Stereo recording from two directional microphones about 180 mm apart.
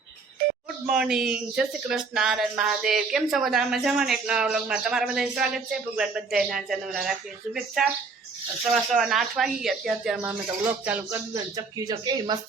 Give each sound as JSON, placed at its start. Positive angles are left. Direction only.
{"t": 0.9, "sound": "speech", "side_deg": -5}
{"t": 11.5, "sound": "speech", "side_deg": -20}